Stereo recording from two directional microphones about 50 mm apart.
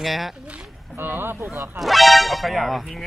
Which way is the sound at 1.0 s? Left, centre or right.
Right.